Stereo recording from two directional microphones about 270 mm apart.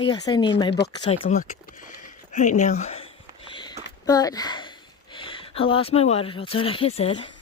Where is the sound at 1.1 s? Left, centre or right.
Left.